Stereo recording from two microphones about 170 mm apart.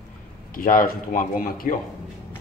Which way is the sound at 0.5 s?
55° left (ahead or behind).